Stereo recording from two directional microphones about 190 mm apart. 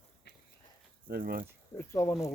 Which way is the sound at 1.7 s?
15° left (ahead or behind).